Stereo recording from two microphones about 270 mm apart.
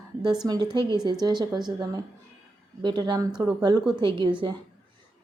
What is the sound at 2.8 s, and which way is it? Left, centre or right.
Speech, centre.